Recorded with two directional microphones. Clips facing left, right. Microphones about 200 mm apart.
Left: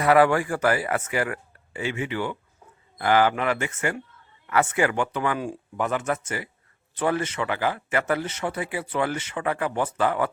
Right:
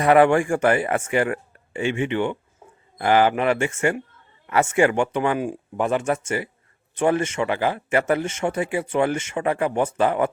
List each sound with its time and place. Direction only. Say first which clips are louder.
0.0 s speech: right 3 dB; 25° right (ahead or behind)